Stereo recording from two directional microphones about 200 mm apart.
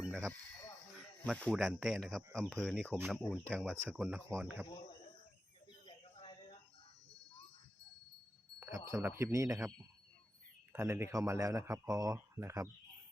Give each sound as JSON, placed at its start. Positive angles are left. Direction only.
{"t": 1.2, "sound": "speech", "side_deg": 5}
{"t": 5.8, "sound": "a sound", "side_deg": 25}
{"t": 8.6, "sound": "speech", "side_deg": -15}